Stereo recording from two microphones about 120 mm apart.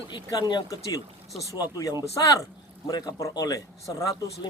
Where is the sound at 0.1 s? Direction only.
40° left (ahead or behind).